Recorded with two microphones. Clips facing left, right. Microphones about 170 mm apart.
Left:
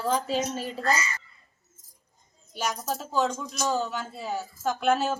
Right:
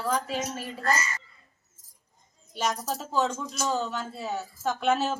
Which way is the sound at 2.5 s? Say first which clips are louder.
Right 1 dB; centre (ahead or behind).